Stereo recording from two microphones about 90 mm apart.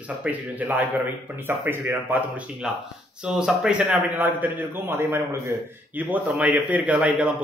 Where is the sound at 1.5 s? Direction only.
25° right (ahead or behind).